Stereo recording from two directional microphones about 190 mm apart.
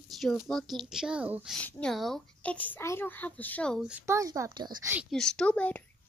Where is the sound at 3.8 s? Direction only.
5° right (ahead or behind); by 4.9 s 20° right (ahead or behind).